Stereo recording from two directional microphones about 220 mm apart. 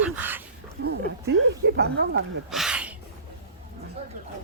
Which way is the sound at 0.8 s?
50° right (ahead or behind).